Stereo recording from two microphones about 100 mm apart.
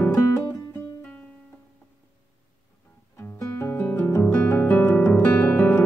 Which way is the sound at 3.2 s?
25° left (ahead or behind).